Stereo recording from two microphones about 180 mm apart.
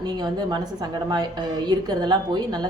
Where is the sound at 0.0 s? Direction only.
25° right (ahead or behind).